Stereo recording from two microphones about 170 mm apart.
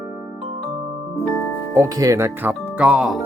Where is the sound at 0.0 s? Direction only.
5° right (ahead or behind).